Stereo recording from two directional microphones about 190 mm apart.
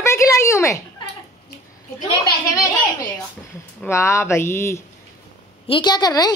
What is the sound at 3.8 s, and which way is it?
A woman's voice, 15° left (ahead or behind).